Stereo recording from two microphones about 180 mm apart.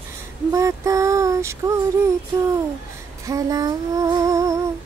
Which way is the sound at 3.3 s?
20° right (ahead or behind).